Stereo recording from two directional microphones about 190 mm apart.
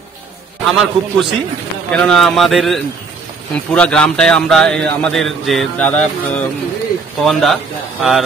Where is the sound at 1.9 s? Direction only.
5° left (ahead or behind).